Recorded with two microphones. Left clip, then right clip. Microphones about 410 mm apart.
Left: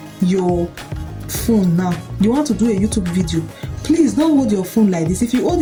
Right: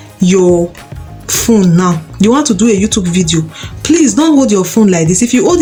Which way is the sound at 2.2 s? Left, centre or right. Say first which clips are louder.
Right 7 dB; left.